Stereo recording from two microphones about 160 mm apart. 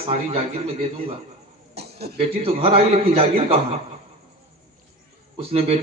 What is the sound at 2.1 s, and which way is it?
A man's voice, 35° right (ahead or behind).